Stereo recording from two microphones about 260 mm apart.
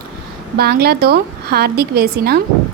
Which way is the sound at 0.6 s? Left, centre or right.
Right.